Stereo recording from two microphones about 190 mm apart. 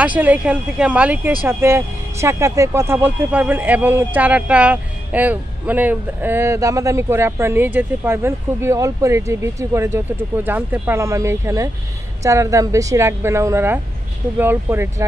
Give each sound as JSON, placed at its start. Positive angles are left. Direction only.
{"t": 0.0, "sound": "speech", "side_deg": -10}